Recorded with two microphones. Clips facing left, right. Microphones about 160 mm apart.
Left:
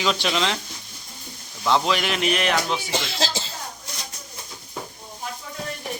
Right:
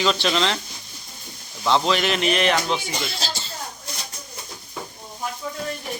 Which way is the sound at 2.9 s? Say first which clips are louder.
Left 3 dB; 90° left.